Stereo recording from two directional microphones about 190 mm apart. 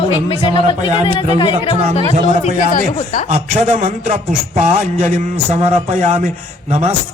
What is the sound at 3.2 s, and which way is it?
A man's voice, 40° right (ahead or behind).